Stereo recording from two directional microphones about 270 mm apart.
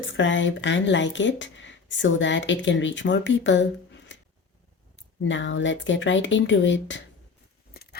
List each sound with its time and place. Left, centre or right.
0.0 s speech: left
4.1 s a sound: left
5.2 s speech: left
7.8 s keys jangling: left